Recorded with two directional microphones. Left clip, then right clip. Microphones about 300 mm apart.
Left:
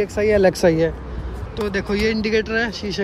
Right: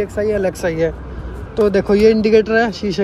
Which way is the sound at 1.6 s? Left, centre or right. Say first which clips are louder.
Right 9 dB; centre.